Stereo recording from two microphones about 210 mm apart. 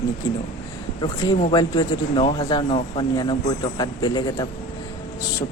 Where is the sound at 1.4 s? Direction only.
25° left (ahead or behind).